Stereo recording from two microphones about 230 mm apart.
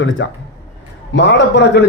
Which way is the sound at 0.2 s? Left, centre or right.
Left.